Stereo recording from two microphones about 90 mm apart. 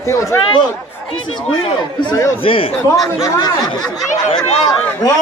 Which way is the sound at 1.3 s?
60° left (ahead or behind).